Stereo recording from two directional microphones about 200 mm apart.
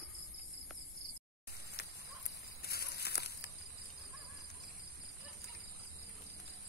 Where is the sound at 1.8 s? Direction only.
55° left (ahead or behind).